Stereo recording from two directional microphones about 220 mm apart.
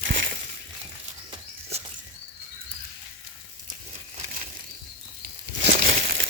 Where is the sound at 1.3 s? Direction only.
30° right (ahead or behind).